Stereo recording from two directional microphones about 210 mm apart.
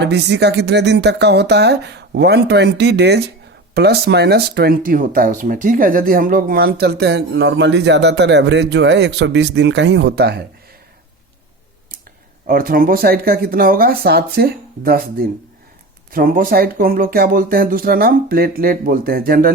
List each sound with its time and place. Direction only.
0.0 s speech: 55° right (ahead or behind)
12.5 s speech: 45° right (ahead or behind)